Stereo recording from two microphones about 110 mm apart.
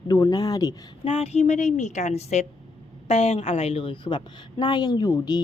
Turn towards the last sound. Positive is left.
turn(degrees=35)  # may be behind; listen again after turning